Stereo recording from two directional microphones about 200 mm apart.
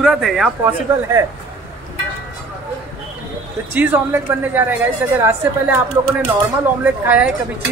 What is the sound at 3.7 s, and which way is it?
Speech, 10° right (ahead or behind).